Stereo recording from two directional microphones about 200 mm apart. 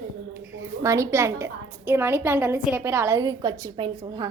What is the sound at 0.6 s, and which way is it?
A woman's voice, 15° right (ahead or behind).